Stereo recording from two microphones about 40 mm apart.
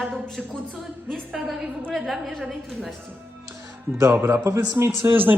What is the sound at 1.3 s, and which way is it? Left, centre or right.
A woman's voice, centre.